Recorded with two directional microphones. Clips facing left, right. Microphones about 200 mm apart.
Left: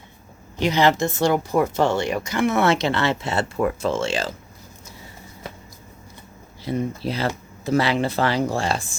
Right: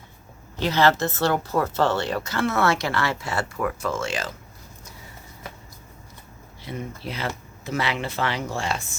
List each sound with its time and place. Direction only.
0.5 s speech: 15° left (ahead or behind)
6.7 s speech: 35° left (ahead or behind)